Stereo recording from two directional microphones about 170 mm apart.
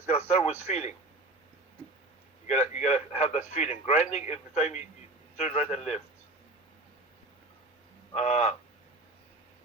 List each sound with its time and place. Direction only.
0.1 s a man's voice: 40° left (ahead or behind)
2.5 s speech: 40° left (ahead or behind)
8.1 s speech: 40° left (ahead or behind)